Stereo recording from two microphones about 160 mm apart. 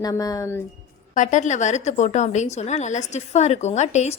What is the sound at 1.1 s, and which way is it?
A woman's voice, 50° left (ahead or behind).